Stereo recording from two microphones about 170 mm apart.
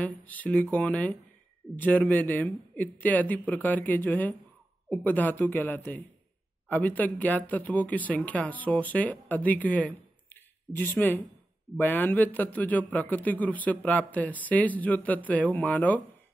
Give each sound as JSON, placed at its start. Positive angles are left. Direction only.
{"t": 0.0, "sound": "speech", "side_deg": 10}